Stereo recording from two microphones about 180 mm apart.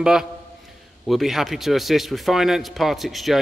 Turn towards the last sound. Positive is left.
turn(degrees=0)  # may be behind; listen again after turning